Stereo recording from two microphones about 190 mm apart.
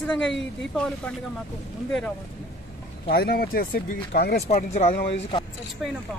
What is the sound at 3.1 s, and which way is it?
Speech, 55° left (ahead or behind).